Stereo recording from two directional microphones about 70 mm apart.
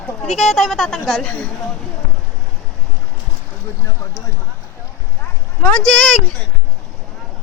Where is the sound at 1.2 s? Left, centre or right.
Centre.